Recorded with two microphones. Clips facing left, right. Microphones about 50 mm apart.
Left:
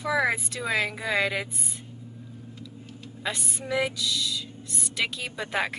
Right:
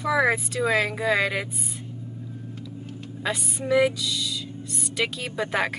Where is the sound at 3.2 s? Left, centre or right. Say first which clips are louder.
Right 4 dB; centre.